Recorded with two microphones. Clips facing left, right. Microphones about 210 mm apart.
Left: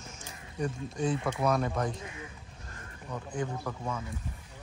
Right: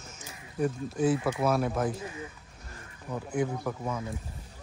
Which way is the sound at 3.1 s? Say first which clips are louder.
Right 5 dB; 10° right (ahead or behind).